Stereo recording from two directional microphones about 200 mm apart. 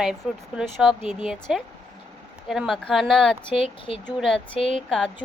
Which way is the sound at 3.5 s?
25° left (ahead or behind).